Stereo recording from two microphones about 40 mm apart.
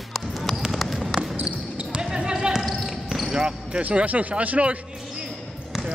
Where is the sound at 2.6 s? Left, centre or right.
Centre.